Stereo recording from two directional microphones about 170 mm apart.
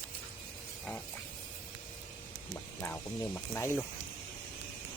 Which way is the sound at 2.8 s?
15° left (ahead or behind).